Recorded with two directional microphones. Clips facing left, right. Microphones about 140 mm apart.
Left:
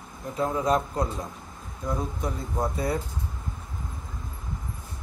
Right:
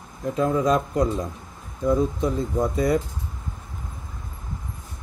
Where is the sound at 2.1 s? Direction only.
90° right.